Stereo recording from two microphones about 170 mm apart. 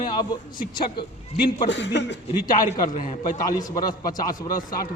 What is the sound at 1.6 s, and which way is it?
Speech, 90° left.